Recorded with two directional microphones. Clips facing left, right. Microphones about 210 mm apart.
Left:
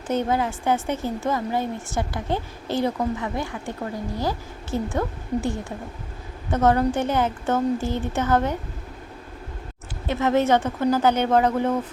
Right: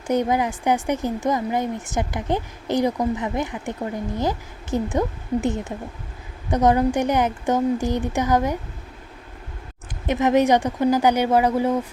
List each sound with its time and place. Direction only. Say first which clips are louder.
0.1 s a woman's voice: right 2 dB; 15° right (ahead or behind)
10.1 s speech: right 2 dB; 15° right (ahead or behind)